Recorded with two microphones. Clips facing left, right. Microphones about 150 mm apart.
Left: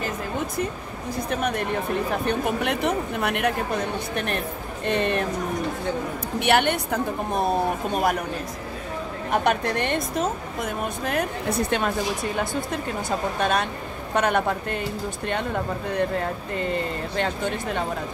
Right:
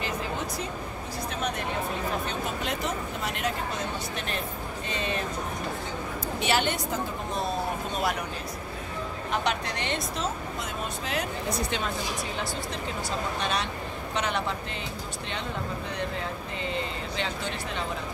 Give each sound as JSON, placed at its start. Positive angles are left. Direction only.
{"t": 1.3, "sound": "speech", "side_deg": 55}
{"t": 6.4, "sound": "speech", "side_deg": 60}
{"t": 9.3, "sound": "speech", "side_deg": 55}